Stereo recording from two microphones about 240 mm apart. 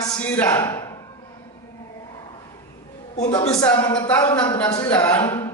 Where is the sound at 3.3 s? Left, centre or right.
Centre.